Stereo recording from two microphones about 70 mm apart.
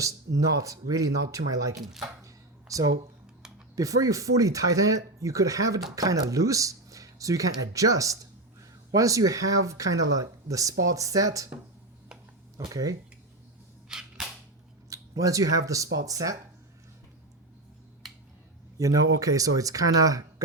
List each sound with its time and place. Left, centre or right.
0.0 s speech: right
2.2 s a sound: right
3.8 s speech: right
12.5 s speech: right
13.8 s cap gun: centre
14.8 s speech: right
18.8 s speech: right